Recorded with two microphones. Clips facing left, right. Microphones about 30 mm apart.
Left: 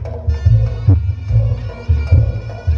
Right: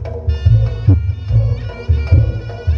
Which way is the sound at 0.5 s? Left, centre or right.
Right.